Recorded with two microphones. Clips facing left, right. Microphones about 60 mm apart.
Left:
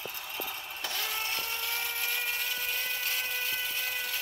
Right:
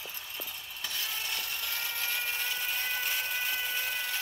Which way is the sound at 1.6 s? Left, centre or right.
Centre.